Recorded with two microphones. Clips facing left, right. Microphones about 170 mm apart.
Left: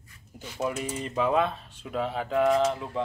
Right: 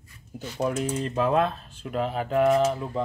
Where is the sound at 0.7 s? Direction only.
5° left (ahead or behind).